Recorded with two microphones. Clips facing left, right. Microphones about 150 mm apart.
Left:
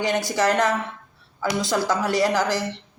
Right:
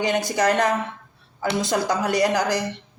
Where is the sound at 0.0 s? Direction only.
20° right (ahead or behind).